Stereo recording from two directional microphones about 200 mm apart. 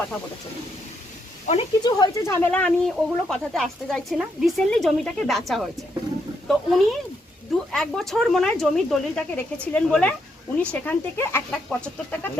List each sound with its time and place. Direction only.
1.5 s speech: 25° left (ahead or behind); by 12.3 s 10° left (ahead or behind)